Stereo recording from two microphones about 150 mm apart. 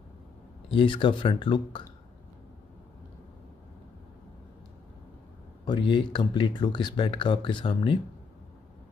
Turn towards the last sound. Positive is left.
turn(degrees=35)  # may be behind; listen again after turning